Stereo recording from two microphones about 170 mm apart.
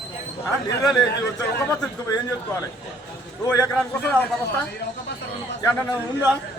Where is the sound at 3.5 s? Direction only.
5° left (ahead or behind).